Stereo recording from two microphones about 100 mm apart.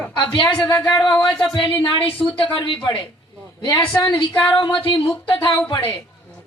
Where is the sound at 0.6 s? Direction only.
25° left (ahead or behind).